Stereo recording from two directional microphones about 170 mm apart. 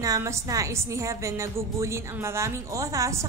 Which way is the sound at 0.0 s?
20° right (ahead or behind).